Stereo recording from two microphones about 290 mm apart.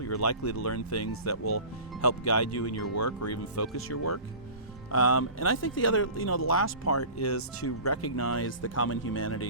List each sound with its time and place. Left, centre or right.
0.0 s speech: left
4.9 s speech: left